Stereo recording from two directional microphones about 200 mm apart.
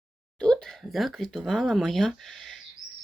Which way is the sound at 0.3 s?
5° left (ahead or behind).